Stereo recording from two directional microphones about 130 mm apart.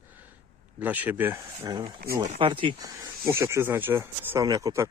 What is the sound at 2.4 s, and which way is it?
Speech, 40° right (ahead or behind).